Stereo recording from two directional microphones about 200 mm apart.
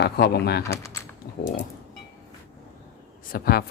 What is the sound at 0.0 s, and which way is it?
Speech, 55° left (ahead or behind).